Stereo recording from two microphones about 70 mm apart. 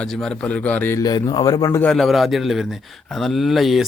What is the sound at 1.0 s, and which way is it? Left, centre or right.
Speech, left.